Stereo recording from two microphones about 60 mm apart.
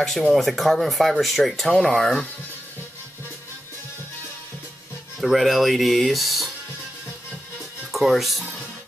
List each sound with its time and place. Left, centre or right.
0.3 s speech: centre
5.2 s speech: centre
7.9 s speech: centre